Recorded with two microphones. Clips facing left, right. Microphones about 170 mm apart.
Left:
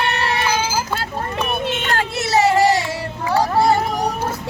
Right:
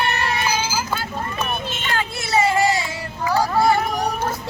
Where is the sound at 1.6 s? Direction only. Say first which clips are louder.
Left 4 dB; 65° left (ahead or behind).